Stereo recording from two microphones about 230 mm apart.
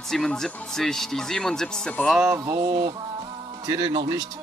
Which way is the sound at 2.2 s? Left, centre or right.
Centre.